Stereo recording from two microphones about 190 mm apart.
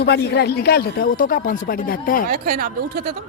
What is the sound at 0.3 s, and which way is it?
Speech, 60° left (ahead or behind).